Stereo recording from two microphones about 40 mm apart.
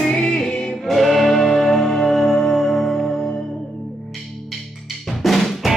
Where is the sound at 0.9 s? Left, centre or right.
Centre.